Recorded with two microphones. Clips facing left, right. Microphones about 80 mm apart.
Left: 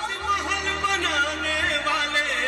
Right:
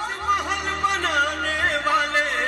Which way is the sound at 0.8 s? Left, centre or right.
Right.